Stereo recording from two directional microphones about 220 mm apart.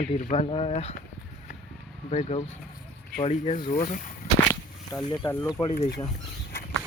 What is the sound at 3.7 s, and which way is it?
Speech, 40° left (ahead or behind).